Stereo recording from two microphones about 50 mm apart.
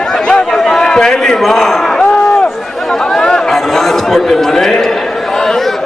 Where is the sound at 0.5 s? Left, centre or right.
Centre.